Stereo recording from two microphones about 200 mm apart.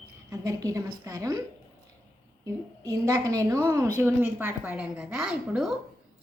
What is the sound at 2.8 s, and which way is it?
A woman's voice, 15° right (ahead or behind).